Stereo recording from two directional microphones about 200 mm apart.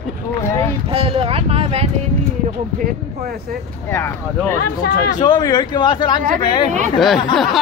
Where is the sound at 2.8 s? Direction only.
50° right (ahead or behind).